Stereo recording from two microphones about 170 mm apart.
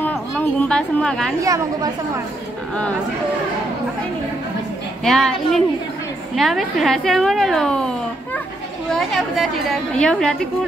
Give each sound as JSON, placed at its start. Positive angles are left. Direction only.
{"t": 0.0, "sound": "a sound", "side_deg": 10}
{"t": 1.4, "sound": "a woman's voice", "side_deg": -20}
{"t": 5.0, "sound": "a woman's voice", "side_deg": 0}
{"t": 8.9, "sound": "a woman's voice", "side_deg": 0}